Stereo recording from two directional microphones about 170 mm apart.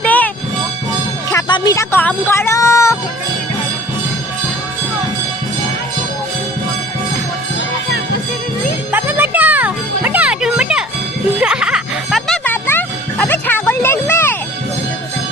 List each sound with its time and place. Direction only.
0.0 s music: 10° left (ahead or behind)
1.3 s music: 20° left (ahead or behind)
8.9 s music: 10° right (ahead or behind)
12.5 s music: 10° left (ahead or behind)